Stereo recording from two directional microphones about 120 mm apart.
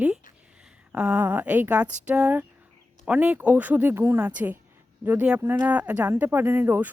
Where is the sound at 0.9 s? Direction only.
10° right (ahead or behind).